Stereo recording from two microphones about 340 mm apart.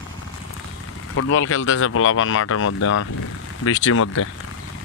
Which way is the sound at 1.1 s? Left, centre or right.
Left.